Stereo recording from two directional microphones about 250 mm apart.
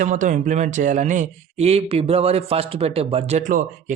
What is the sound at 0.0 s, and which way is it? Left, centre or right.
A man's voice, right.